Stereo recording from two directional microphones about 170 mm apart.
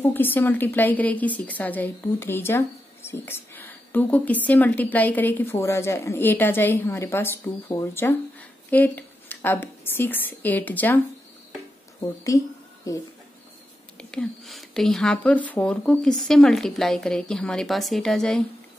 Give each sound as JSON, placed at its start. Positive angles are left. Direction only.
{"t": 0.0, "sound": "a woman's voice", "side_deg": 10}
{"t": 12.3, "sound": "a woman's voice", "side_deg": 20}
{"t": 13.9, "sound": "speech", "side_deg": 5}